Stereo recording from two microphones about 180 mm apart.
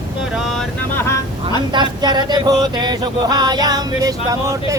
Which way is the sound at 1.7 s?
25° right (ahead or behind).